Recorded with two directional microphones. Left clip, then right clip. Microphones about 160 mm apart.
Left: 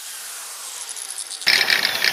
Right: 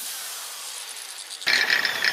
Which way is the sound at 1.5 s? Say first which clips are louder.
Left 4 dB; 90° left.